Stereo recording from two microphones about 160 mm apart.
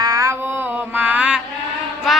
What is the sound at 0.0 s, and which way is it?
Mantra, 20° right (ahead or behind).